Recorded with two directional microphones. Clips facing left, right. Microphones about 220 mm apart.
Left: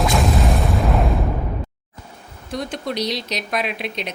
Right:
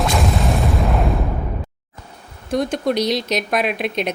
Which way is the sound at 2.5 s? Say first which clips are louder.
Right 7 dB; 50° right (ahead or behind).